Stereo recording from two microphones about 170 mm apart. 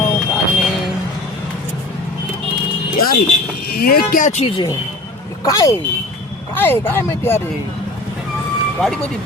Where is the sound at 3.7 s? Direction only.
60° left (ahead or behind).